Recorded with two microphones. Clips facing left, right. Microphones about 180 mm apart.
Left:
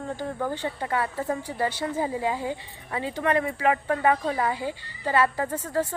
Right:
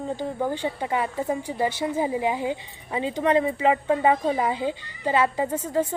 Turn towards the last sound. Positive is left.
turn(degrees=-15)  # may be behind; listen again after turning